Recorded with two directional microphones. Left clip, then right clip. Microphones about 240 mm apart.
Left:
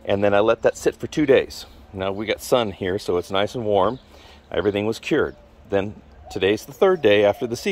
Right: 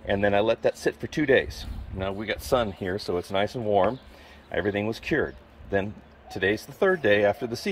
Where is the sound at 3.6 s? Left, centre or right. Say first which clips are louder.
Left 4 dB; left.